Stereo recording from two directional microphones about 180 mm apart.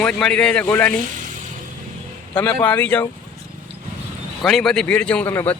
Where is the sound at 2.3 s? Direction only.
10° left (ahead or behind).